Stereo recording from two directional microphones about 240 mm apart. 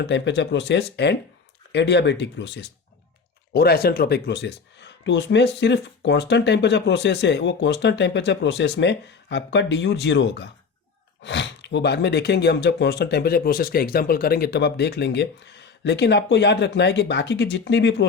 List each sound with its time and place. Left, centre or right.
0.0 s speech: left